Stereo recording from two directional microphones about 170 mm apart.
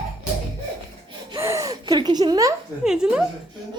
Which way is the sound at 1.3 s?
15° right (ahead or behind).